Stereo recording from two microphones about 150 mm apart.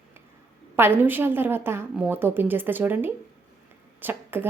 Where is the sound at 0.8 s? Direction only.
15° right (ahead or behind).